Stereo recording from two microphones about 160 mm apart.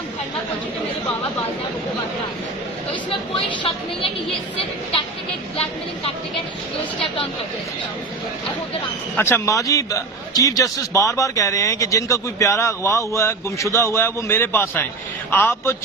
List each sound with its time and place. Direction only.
2.9 s speech: 30° left (ahead or behind)
9.1 s a man's voice: 15° left (ahead or behind)